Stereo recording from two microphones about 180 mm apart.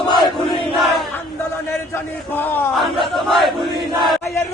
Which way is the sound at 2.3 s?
10° left (ahead or behind).